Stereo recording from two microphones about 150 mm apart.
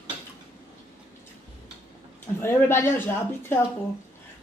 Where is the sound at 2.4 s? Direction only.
15° left (ahead or behind).